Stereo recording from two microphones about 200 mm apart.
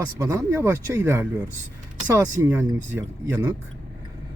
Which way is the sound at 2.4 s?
10° right (ahead or behind).